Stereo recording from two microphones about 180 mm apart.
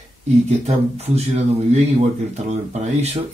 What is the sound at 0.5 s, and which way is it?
Speech, 35° right (ahead or behind).